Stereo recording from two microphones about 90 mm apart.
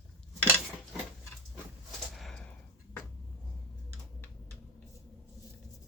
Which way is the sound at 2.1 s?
Centre (ahead or behind).